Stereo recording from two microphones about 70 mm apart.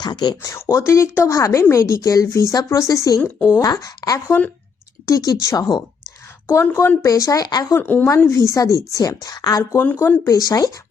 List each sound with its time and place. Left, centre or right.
0.0 s speech: left
0.7 s a woman's voice: left
4.3 s speech: left
5.0 s a woman's voice: left
5.5 s speech: left
6.5 s speech: left
7.0 s a woman's voice: left
7.8 s speech: left
8.3 s a woman's voice: left
9.7 s speech: left
10.2 s a woman's voice: left